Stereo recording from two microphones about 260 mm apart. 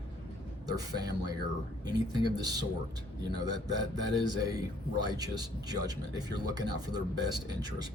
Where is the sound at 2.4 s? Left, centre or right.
Centre.